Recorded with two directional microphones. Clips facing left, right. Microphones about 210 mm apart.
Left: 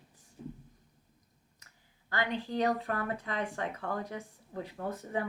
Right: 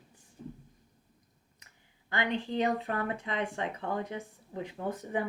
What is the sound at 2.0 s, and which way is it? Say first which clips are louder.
Speech: right 2 dB; 20° right (ahead or behind).